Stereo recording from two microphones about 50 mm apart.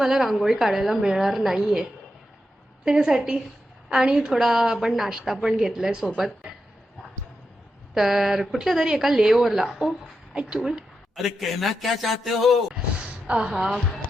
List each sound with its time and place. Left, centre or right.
0.0 s a woman's voice: centre
7.9 s a woman's voice: centre
13.2 s a woman's voice: right
13.5 s a woman's voice: centre